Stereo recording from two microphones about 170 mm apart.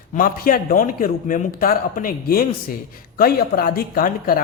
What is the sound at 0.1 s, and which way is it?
A man's voice, 55° left (ahead or behind).